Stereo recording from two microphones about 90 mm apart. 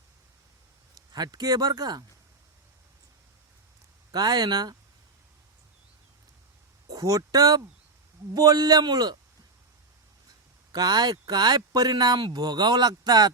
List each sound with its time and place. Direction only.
0.9 s speech: 50° right (ahead or behind)
4.1 s speech: 45° right (ahead or behind)
6.9 s speech: 40° right (ahead or behind)
10.7 s speech: 45° right (ahead or behind)